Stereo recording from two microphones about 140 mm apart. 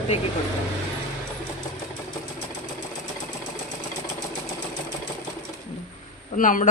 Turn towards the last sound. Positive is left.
turn(degrees=70)  # may be behind; listen again after turning